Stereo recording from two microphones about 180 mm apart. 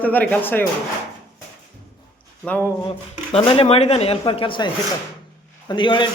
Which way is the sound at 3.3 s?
30° left (ahead or behind).